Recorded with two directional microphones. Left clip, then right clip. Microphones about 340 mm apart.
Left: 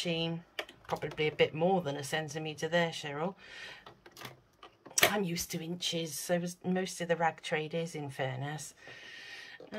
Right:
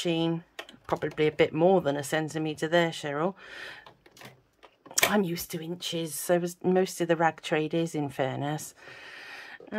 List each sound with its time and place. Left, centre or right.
0.0 s speech: centre
4.9 s speech: centre